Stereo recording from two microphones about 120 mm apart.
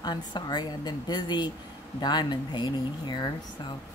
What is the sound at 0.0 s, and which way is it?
A woman's voice, 35° left (ahead or behind).